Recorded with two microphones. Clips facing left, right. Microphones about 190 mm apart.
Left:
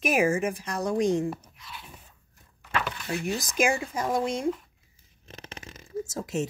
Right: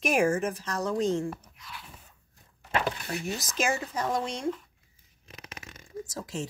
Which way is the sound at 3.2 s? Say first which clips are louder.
Left 5 dB; 15° left (ahead or behind).